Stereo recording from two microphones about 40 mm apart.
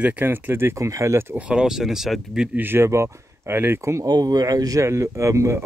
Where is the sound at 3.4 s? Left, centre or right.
Right.